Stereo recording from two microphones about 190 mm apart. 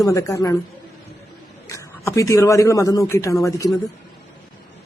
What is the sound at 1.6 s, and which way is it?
Speech, 15° left (ahead or behind).